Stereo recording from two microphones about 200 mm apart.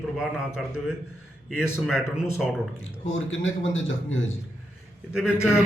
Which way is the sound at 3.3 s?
75° left (ahead or behind).